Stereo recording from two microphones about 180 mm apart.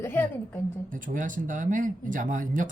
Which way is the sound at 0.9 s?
45° right (ahead or behind).